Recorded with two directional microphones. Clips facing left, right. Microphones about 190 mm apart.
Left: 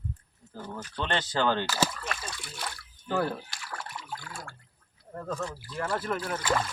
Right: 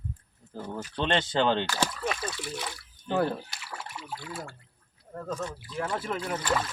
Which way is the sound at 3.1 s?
20° right (ahead or behind).